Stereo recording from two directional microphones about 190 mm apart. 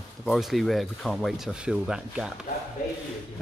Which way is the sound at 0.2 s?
Centre (ahead or behind).